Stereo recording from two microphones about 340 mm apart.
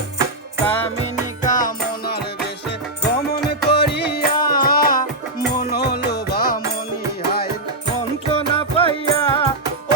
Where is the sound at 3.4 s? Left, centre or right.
Left.